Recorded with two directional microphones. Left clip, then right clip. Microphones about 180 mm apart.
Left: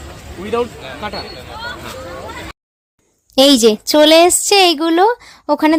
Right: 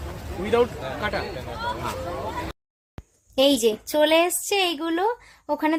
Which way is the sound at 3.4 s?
50° left (ahead or behind).